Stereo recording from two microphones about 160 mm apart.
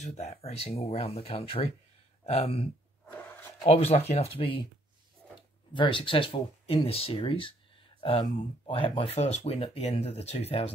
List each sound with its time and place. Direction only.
0.0 s speech: 45° left (ahead or behind)
5.8 s speech: 30° left (ahead or behind)